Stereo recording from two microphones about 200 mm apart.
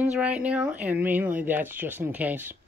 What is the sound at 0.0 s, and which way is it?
Speech, 5° right (ahead or behind).